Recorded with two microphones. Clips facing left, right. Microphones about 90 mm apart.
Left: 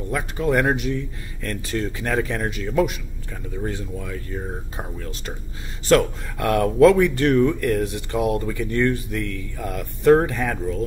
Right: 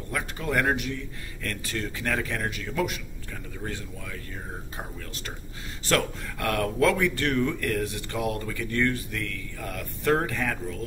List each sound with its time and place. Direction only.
0.1 s speech: 25° left (ahead or behind)
5.9 s speech: 20° left (ahead or behind)